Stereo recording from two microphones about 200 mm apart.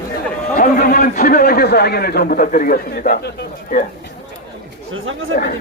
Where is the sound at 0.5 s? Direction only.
45° left (ahead or behind).